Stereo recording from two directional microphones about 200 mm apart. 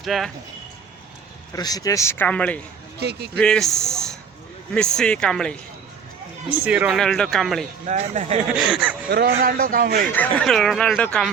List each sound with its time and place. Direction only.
0.0 s speech: centre (ahead or behind)
1.5 s speech: 20° left (ahead or behind)
3.0 s speech: 55° right (ahead or behind)
3.4 s speech: 5° left (ahead or behind)
6.5 s speech: 5° right (ahead or behind)
7.9 s speech: 35° right (ahead or behind)
8.5 s speech: 5° right (ahead or behind)
9.0 s a man's voice: 55° right (ahead or behind)
10.1 s speech: 5° left (ahead or behind)